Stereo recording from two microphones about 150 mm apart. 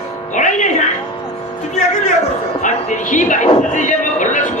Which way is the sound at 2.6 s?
55° left (ahead or behind).